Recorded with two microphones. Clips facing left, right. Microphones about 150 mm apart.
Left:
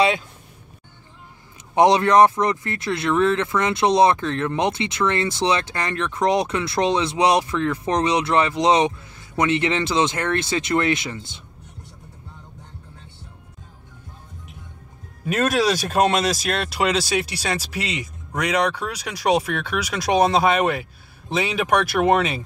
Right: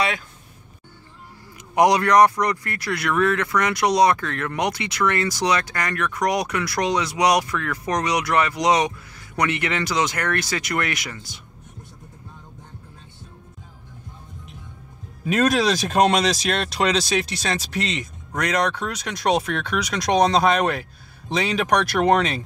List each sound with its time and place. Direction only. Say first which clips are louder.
1.8 s speech: left 1 dB; 25° left (ahead or behind)
15.2 s speech: right 1 dB; 5° left (ahead or behind)